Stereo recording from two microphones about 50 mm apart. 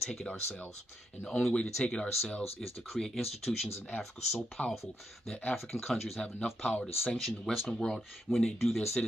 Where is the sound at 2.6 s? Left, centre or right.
Centre.